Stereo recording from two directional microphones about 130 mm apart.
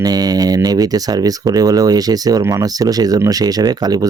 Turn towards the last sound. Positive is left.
turn(degrees=-30)  # may be behind; listen again after turning